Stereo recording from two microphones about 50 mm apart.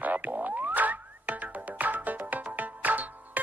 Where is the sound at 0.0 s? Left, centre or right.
Right.